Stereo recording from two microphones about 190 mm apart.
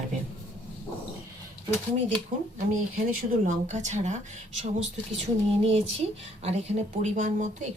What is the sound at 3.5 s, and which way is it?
Speech, 40° right (ahead or behind).